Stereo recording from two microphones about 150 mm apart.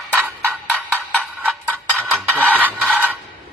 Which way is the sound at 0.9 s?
10° left (ahead or behind).